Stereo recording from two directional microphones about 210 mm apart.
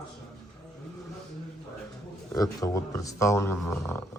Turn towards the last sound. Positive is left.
turn(degrees=10)  # may be behind; listen again after turning